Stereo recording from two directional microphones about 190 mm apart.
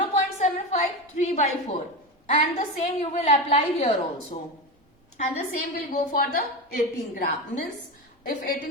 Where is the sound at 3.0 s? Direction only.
35° left (ahead or behind).